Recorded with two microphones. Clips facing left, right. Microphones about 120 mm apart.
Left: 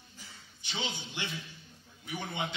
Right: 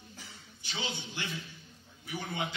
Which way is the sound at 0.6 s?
20° left (ahead or behind).